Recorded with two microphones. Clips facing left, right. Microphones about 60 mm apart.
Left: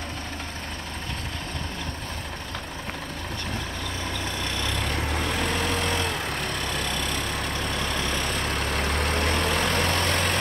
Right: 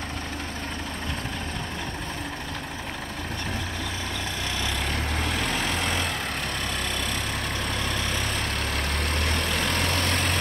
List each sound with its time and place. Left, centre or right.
4.6 s vehicle: centre
8.8 s vehicle: centre